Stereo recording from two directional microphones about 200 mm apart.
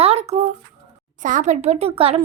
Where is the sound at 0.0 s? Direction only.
30° right (ahead or behind).